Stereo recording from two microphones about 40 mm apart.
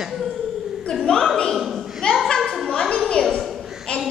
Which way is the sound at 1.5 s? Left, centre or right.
Centre.